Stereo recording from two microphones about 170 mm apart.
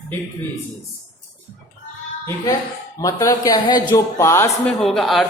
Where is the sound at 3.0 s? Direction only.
20° left (ahead or behind).